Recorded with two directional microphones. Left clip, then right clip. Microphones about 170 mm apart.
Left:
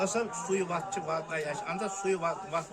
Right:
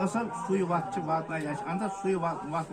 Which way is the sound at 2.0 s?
90° left.